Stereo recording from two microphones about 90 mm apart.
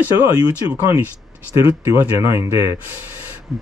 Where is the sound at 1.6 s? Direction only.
30° right (ahead or behind).